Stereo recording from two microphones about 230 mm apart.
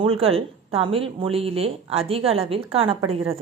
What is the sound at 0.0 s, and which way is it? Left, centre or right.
A woman's voice, right.